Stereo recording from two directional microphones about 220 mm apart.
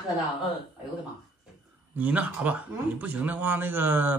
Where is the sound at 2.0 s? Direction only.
5° right (ahead or behind).